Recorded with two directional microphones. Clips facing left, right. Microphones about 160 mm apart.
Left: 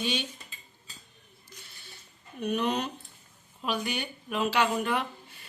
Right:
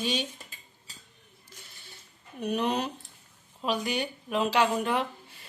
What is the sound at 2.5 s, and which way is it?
A woman's voice, 30° right (ahead or behind).